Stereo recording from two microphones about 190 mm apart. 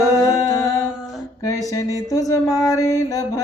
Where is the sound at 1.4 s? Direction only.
15° left (ahead or behind).